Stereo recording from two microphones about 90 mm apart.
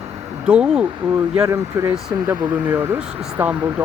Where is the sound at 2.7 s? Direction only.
30° right (ahead or behind).